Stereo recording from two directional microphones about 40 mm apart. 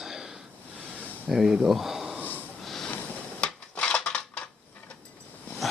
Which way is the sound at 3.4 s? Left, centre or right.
Left.